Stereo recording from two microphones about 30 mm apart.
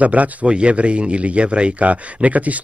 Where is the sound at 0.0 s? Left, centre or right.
Right.